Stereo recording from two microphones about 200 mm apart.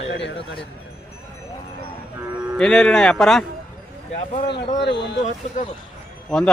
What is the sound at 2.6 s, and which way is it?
Speech, 5° left (ahead or behind).